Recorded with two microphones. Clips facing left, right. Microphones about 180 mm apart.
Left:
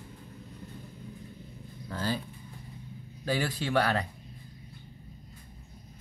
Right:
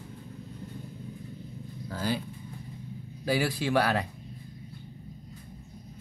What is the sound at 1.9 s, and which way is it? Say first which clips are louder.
Speech: right 1 dB; 10° right (ahead or behind).